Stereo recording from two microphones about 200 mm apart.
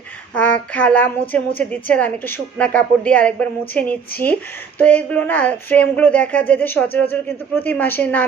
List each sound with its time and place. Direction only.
0.3 s a woman's voice: 5° left (ahead or behind)